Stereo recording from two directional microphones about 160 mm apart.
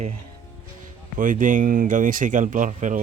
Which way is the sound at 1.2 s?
55° right (ahead or behind).